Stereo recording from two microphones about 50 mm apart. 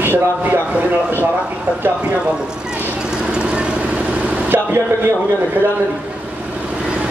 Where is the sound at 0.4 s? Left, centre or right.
Right.